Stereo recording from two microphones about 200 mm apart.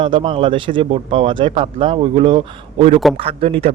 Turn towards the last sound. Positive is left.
turn(degrees=-30)  # may be behind; listen again after turning